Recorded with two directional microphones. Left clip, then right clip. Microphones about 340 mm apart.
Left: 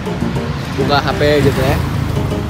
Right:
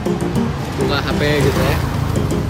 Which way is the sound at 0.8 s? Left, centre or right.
Centre.